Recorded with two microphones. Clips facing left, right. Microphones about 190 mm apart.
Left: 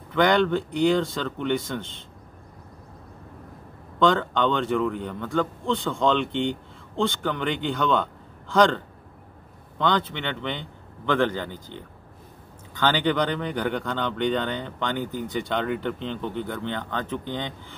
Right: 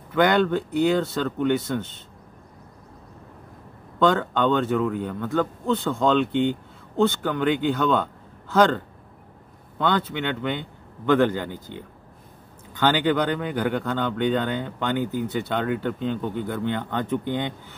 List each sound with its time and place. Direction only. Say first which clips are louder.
0.1 s a man's voice: right 1 dB; 5° right (ahead or behind)
4.0 s a man's voice: right 1 dB; 5° right (ahead or behind)